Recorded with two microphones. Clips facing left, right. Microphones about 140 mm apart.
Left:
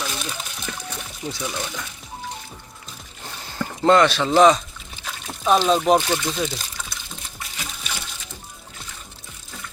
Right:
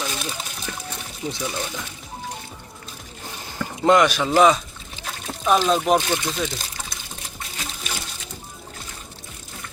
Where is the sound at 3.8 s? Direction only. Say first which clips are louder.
Left 1 dB; 10° right (ahead or behind).